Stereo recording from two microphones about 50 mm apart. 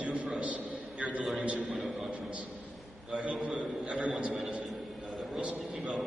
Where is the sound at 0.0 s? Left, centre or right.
Right.